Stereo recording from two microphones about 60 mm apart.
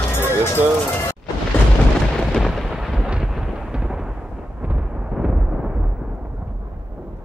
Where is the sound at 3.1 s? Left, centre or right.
Centre.